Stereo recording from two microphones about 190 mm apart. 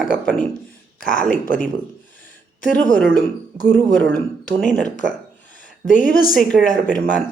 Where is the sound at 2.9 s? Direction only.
50° left (ahead or behind).